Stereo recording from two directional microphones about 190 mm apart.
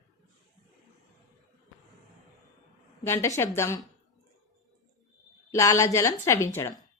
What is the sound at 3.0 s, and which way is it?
Speech, 15° left (ahead or behind).